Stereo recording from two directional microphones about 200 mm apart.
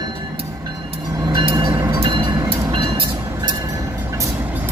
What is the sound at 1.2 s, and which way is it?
Train, 25° right (ahead or behind).